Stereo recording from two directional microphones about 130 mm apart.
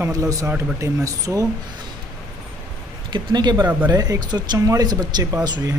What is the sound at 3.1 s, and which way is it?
Speech, 35° right (ahead or behind).